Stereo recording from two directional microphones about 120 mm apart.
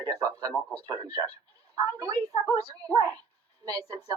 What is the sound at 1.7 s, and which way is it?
A woman's voice, 30° right (ahead or behind).